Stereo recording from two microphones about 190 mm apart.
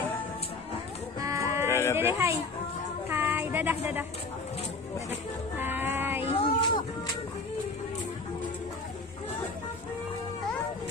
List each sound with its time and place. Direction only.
1.2 s music: 15° right (ahead or behind)
1.7 s a sound: 15° left (ahead or behind)
2.0 s a child's voice: 10° right (ahead or behind)
3.1 s music: 10° right (ahead or behind)
5.6 s music: 10° right (ahead or behind)
6.4 s music: 25° left (ahead or behind)